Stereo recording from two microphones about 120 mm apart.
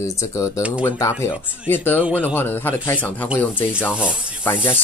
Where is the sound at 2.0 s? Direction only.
10° right (ahead or behind).